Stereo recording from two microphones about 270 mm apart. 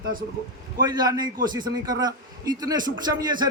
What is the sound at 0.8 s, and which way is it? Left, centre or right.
A man's voice, centre.